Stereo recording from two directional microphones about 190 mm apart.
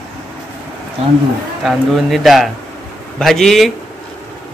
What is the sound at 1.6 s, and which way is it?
A man's voice, centre (ahead or behind).